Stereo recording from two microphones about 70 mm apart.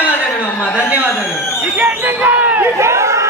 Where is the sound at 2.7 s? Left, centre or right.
Right.